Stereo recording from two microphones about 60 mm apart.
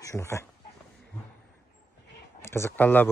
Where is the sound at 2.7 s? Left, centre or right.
Left.